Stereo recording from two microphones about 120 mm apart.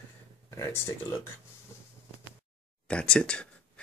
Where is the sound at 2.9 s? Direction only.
10° left (ahead or behind).